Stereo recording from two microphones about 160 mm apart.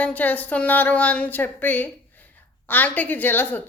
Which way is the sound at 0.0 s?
10° left (ahead or behind).